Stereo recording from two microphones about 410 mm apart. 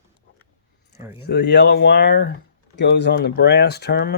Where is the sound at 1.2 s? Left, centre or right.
Left.